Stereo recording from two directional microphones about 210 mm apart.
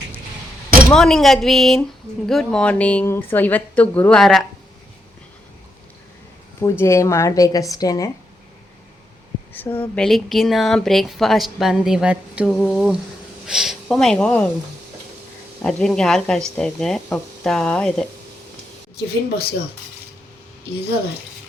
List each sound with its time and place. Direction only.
0.9 s speech: centre (ahead or behind)
6.6 s a woman's voice: 10° left (ahead or behind)
9.5 s speech: 10° left (ahead or behind)
15.6 s speech: 5° left (ahead or behind)
18.9 s speech: 50° left (ahead or behind)